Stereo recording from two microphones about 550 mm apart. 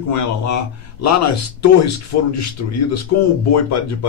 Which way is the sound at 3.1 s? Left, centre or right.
Left.